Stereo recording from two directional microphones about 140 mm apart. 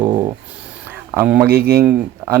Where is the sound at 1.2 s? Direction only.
15° right (ahead or behind).